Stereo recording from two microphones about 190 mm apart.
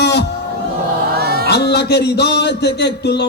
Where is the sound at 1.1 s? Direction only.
55° right (ahead or behind).